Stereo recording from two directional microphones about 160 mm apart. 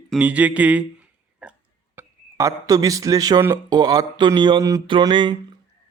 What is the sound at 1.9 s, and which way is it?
Speech, 20° right (ahead or behind).